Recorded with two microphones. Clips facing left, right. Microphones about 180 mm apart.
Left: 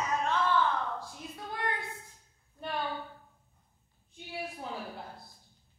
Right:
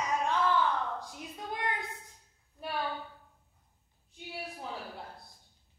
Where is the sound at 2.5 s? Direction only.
5° right (ahead or behind).